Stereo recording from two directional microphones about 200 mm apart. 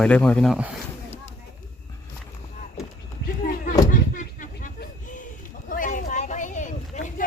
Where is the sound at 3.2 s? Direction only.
40° left (ahead or behind).